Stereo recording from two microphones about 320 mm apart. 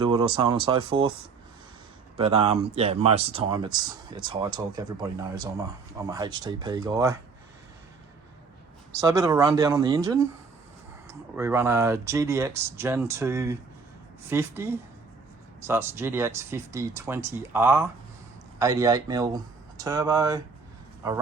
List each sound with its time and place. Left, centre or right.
0.0 s speech: centre
2.1 s speech: centre
8.9 s speech: centre